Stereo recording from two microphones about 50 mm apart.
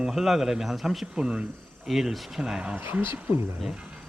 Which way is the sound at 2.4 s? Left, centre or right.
Centre.